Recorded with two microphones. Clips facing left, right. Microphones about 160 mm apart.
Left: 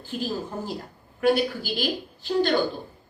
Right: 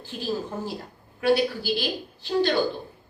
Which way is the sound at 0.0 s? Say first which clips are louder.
Even; 50° left (ahead or behind).